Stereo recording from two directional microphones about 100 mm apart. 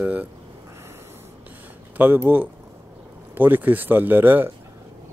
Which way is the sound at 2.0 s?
20° right (ahead or behind).